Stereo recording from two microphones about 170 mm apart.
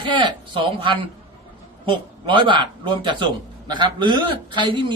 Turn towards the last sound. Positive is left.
turn(degrees=-30)  # may be behind; listen again after turning